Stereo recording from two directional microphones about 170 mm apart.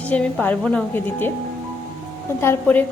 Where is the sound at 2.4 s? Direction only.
10° left (ahead or behind).